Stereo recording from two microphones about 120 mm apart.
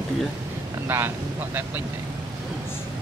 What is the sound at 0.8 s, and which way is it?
Speech, 20° right (ahead or behind).